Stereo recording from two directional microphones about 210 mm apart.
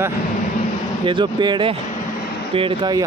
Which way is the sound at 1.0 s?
20° right (ahead or behind).